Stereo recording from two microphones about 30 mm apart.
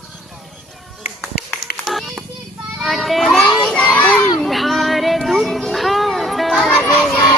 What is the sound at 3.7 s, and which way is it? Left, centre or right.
Children playing, left.